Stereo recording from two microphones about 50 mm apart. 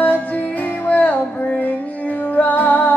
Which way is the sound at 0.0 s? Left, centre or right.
Left.